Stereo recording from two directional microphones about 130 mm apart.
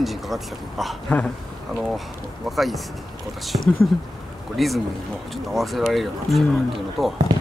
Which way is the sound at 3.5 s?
45° right (ahead or behind).